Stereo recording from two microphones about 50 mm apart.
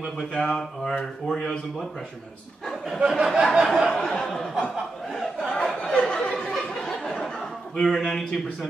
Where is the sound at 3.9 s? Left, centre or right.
Centre.